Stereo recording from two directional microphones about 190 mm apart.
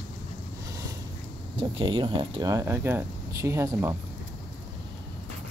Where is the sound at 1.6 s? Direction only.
25° right (ahead or behind).